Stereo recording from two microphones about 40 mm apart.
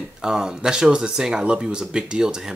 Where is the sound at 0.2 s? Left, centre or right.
Centre.